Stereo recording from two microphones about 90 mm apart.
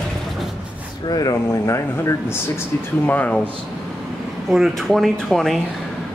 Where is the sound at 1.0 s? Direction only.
45° left (ahead or behind).